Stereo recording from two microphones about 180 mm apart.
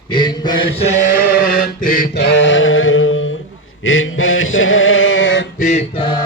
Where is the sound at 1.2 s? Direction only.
55° left (ahead or behind).